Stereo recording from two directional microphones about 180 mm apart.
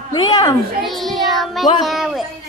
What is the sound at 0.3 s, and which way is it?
Speech, 20° left (ahead or behind).